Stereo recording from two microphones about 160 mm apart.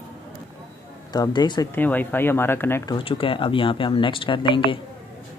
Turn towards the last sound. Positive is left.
turn(degrees=30)  # may be behind; listen again after turning